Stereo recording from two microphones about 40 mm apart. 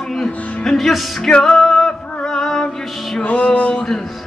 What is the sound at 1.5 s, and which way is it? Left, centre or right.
Music, centre.